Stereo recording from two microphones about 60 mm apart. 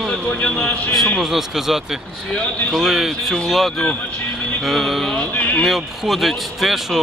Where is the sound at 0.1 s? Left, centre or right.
Centre.